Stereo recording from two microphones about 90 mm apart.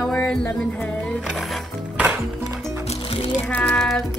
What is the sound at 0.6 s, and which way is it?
Speech, 10° left (ahead or behind).